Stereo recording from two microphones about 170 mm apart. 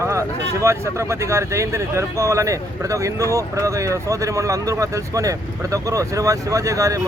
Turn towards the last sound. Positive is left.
turn(degrees=-20)  # may be behind; listen again after turning